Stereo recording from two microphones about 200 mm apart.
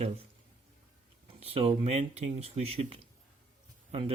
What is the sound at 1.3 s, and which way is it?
Speech, 30° right (ahead or behind).